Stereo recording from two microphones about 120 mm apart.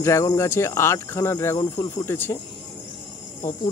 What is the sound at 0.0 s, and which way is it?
Cricket, 25° left (ahead or behind).